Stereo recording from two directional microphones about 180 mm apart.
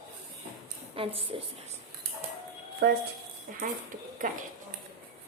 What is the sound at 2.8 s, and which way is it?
Speech, 70° right (ahead or behind).